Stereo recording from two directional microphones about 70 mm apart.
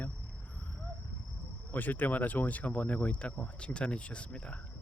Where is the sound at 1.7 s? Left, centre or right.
Left.